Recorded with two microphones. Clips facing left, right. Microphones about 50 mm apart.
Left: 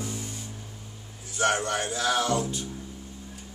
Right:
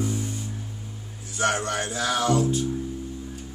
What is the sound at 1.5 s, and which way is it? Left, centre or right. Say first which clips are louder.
Music: right 1 dB; centre.